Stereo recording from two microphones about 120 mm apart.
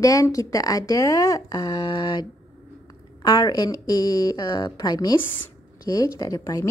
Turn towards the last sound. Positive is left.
turn(degrees=30)  # may be behind; listen again after turning